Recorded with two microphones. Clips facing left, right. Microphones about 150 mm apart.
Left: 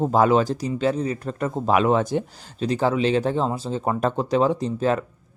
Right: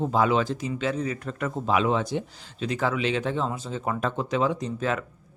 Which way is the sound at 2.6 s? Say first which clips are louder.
Left 5 dB; 30° left (ahead or behind).